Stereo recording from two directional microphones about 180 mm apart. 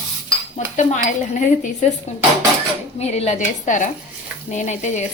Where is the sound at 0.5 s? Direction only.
45° left (ahead or behind).